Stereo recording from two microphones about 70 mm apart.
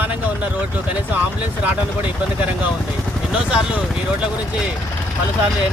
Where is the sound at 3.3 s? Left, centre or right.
Centre.